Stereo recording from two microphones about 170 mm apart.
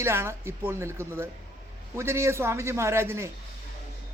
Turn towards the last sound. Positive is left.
turn(degrees=-15)  # may be behind; listen again after turning